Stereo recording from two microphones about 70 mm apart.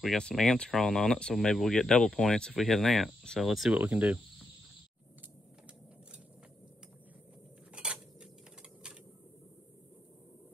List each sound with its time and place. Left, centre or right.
0.2 s speech: centre
3.7 s cricket: right
7.7 s dishes: centre